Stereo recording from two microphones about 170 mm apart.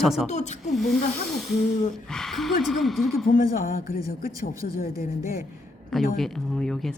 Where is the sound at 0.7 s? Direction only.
Centre (ahead or behind).